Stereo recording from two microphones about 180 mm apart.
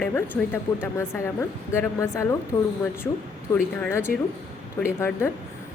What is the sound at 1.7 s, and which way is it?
Speech, 15° left (ahead or behind).